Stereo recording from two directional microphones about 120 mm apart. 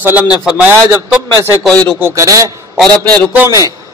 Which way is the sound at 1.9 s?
20° right (ahead or behind).